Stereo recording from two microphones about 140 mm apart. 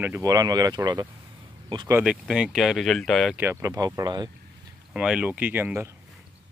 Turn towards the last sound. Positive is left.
turn(degrees=-15)  # may be behind; listen again after turning